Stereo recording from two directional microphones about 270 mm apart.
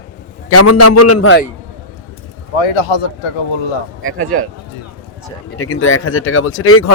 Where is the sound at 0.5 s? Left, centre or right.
Left.